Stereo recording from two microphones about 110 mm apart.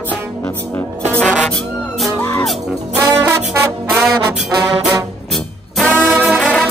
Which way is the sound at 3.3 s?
20° right (ahead or behind).